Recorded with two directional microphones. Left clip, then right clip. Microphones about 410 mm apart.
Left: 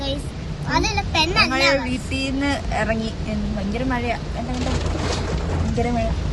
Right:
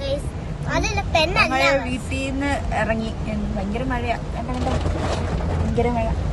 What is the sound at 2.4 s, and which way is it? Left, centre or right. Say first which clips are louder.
Speech: right 1 dB; centre.